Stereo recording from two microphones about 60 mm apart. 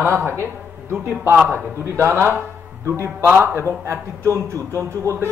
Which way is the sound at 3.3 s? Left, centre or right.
Right.